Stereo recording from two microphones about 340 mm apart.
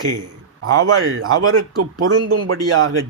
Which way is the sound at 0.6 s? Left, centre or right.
Right.